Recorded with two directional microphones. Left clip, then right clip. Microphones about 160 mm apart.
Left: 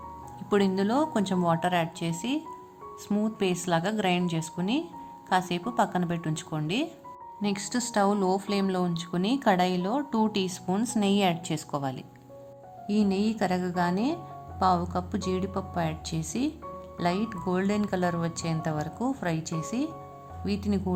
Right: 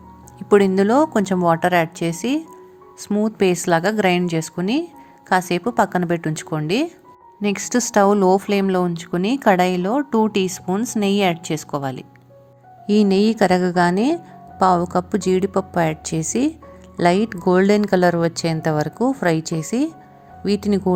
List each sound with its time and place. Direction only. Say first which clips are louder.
0.5 s a woman's voice: right 11 dB; 40° right (ahead or behind)
12.9 s a woman's voice: right 12 dB; 45° right (ahead or behind)